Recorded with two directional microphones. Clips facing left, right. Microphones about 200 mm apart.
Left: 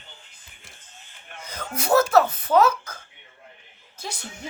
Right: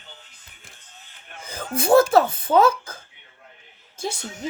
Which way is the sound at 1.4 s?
30° right (ahead or behind).